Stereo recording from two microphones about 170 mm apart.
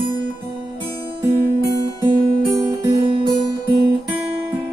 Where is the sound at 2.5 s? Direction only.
20° right (ahead or behind).